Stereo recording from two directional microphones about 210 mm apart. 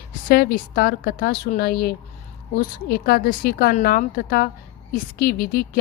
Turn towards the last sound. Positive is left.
turn(degrees=45)  # may be behind; listen again after turning